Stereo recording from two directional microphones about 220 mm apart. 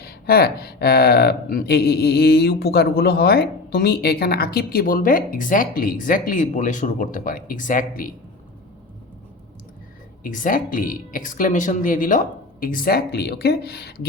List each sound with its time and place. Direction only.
0.0 s speech: 45° left (ahead or behind)
10.2 s speech: 40° left (ahead or behind)